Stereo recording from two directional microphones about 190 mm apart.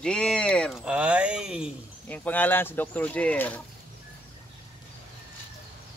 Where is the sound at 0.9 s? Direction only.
5° right (ahead or behind).